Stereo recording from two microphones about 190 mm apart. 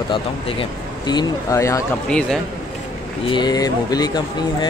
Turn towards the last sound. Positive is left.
turn(degrees=20)  # may be behind; listen again after turning